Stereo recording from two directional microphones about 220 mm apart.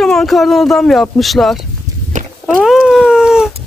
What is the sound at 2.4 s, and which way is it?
Dog, centre (ahead or behind).